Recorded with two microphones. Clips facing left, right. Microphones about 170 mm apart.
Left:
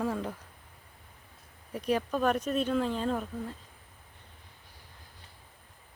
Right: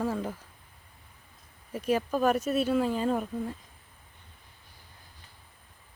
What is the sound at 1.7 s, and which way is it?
Speech, 5° right (ahead or behind).